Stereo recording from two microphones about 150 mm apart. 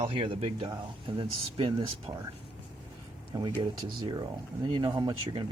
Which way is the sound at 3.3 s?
30° right (ahead or behind).